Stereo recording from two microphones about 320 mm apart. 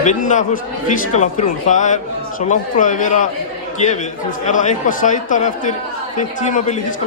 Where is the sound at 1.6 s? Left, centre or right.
Left.